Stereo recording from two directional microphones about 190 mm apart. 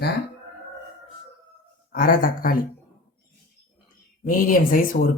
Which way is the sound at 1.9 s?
45° left (ahead or behind).